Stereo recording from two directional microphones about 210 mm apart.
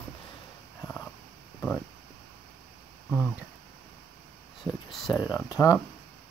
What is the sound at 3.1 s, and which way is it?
Speech, 5° right (ahead or behind).